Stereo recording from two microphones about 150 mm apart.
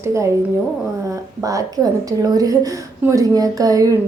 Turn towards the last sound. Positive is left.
turn(degrees=-25)  # may be behind; listen again after turning